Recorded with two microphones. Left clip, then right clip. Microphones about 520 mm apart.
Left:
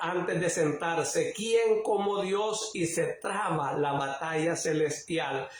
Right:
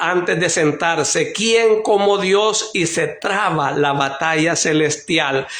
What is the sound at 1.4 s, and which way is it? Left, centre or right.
Speech, centre.